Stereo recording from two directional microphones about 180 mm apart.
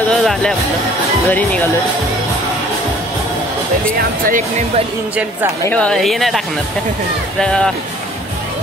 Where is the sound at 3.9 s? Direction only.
50° right (ahead or behind).